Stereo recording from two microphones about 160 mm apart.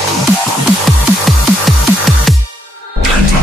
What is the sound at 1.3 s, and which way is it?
Music, centre (ahead or behind).